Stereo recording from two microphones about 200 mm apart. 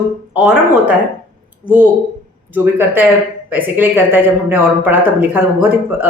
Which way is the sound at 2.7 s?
10° right (ahead or behind).